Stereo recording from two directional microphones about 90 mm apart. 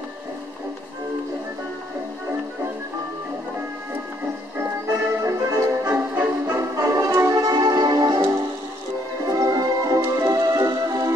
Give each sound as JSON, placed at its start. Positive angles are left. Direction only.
{"t": 4.6, "sound": "music", "side_deg": -30}
{"t": 9.3, "sound": "music", "side_deg": -40}